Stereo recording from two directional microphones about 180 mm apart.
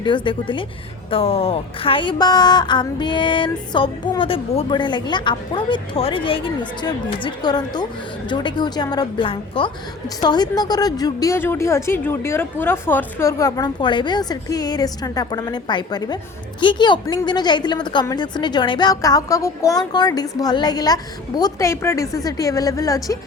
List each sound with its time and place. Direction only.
0.0 s a woman's voice: 25° left (ahead or behind)